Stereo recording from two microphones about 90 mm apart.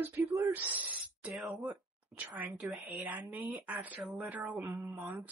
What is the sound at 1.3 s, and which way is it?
A woman's voice, centre (ahead or behind).